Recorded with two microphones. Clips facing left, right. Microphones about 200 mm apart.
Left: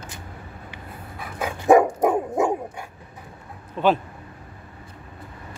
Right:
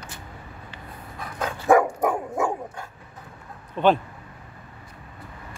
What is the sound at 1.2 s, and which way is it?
Dog, 10° left (ahead or behind).